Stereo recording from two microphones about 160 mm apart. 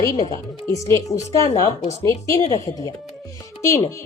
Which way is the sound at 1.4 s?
45° left (ahead or behind).